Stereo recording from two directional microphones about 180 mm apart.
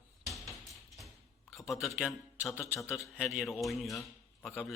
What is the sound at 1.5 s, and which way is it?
A man's voice, centre (ahead or behind).